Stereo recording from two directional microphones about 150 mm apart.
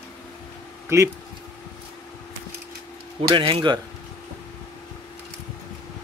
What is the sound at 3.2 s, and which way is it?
Speech, 35° right (ahead or behind).